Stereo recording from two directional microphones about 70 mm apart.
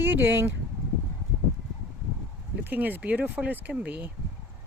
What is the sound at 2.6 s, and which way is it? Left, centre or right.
Speech, right.